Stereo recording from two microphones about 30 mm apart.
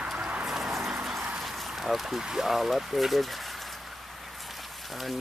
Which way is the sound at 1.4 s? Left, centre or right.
Centre.